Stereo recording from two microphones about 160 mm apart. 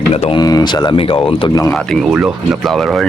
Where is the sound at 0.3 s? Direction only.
25° left (ahead or behind).